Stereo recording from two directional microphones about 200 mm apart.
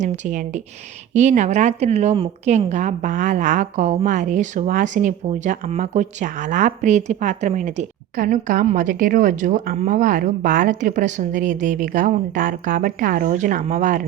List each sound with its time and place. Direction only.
0.0 s a woman's voice: 40° right (ahead or behind)